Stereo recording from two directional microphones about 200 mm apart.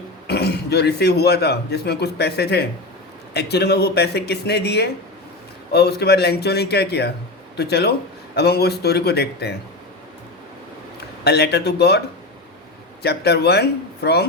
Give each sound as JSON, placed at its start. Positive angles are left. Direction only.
{"t": 0.3, "sound": "a man's voice", "side_deg": 55}
{"t": 11.2, "sound": "a man's voice", "side_deg": 55}